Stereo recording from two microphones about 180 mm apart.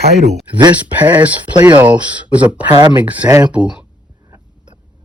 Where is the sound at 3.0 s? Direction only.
10° right (ahead or behind).